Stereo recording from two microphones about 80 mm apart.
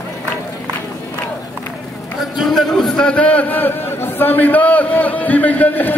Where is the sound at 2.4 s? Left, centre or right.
Centre.